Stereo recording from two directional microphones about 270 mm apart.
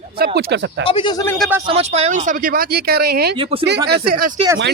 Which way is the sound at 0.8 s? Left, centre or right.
Centre.